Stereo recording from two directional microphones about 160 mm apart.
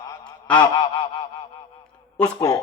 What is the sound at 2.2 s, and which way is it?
Speech, 20° left (ahead or behind).